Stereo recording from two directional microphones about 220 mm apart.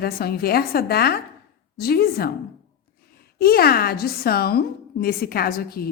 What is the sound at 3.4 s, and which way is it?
A woman's voice, 45° left (ahead or behind).